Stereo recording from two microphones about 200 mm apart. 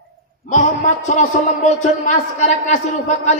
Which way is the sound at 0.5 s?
35° left (ahead or behind).